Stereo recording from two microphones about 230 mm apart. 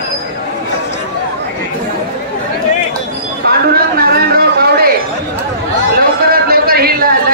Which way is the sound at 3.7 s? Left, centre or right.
Right.